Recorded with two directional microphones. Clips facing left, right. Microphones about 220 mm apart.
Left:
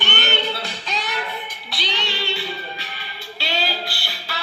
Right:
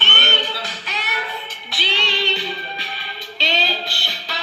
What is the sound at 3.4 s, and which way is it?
Music, 20° right (ahead or behind).